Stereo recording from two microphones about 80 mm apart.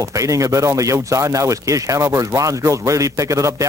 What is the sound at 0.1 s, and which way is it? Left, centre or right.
Speech, right.